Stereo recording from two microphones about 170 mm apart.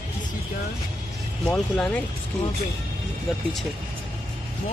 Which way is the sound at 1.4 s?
5° left (ahead or behind).